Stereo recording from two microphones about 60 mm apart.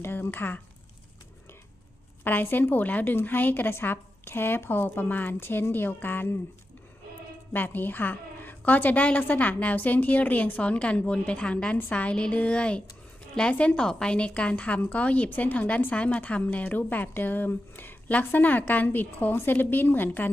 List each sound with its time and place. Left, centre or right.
0.0 s a woman's voice: left
2.2 s a woman's voice: left
7.5 s a woman's voice: left